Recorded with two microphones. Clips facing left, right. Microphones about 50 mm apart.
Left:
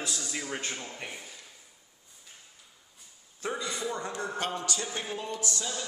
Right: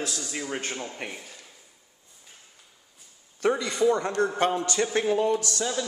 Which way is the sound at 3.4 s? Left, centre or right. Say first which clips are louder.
Right 10 dB; right.